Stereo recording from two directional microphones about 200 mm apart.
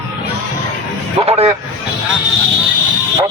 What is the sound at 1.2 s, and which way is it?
Speech, 30° right (ahead or behind).